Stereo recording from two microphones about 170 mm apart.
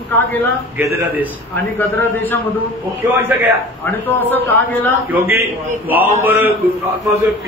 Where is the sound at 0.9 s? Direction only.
10° right (ahead or behind).